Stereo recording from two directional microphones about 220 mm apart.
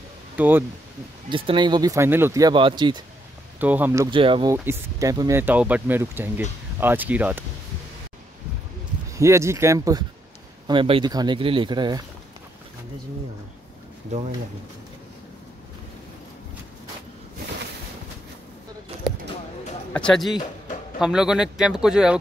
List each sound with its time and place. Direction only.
0.4 s speech: 10° right (ahead or behind)
1.3 s speech: 25° right (ahead or behind)
3.5 s speech: 10° right (ahead or behind)
9.1 s speech: 15° right (ahead or behind)
19.9 s speech: 5° left (ahead or behind)